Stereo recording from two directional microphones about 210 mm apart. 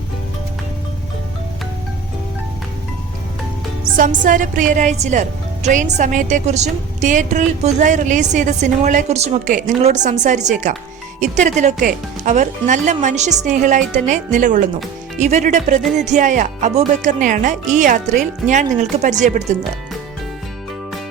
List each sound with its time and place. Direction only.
3.9 s a woman's voice: 40° right (ahead or behind)